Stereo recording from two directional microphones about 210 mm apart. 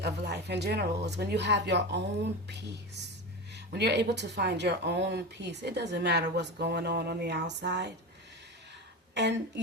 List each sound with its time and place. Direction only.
0.0 s speech: 55° right (ahead or behind)